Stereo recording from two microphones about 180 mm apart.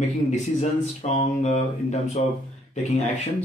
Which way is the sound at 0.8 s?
40° left (ahead or behind).